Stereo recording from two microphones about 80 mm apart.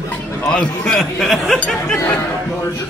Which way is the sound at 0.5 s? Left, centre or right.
Centre.